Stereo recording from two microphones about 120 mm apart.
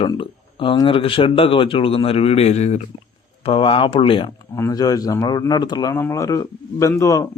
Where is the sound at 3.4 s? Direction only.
50° left (ahead or behind).